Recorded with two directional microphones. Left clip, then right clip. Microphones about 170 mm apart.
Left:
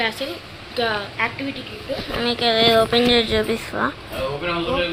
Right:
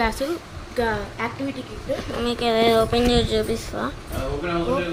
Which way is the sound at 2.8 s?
Centre (ahead or behind).